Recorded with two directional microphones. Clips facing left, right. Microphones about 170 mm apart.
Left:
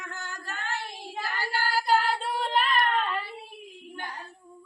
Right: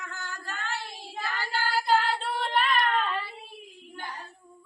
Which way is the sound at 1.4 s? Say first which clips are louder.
Left 1 dB; 10° left (ahead or behind).